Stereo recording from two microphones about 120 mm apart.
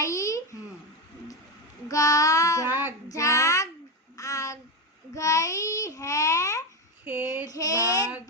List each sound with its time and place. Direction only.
0.0 s a sound: 25° left (ahead or behind)
1.9 s child singing: 30° left (ahead or behind)
2.6 s child singing: 15° right (ahead or behind)
3.1 s child singing: 25° left (ahead or behind)
4.2 s a sound: 25° left (ahead or behind)
5.1 s babbling: 25° left (ahead or behind)
7.0 s child singing: 15° right (ahead or behind)
7.4 s child singing: 30° left (ahead or behind)